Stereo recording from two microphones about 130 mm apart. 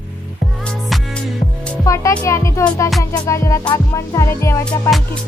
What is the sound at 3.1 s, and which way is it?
Speech, 25° left (ahead or behind).